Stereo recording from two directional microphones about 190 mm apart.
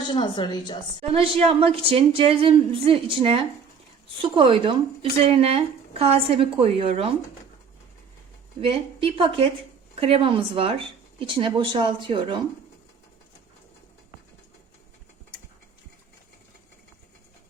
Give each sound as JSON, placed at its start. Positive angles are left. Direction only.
{"t": 0.0, "sound": "speech", "side_deg": 25}
{"t": 1.1, "sound": "speech", "side_deg": -30}
{"t": 8.6, "sound": "speech", "side_deg": -30}